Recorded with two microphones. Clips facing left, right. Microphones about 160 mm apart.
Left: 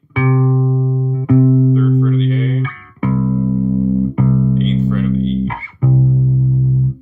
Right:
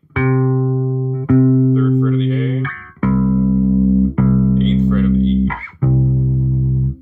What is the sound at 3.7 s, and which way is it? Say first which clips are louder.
Music: right 2 dB; centre (ahead or behind).